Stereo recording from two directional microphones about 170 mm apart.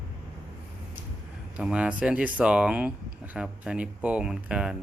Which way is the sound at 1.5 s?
5° right (ahead or behind).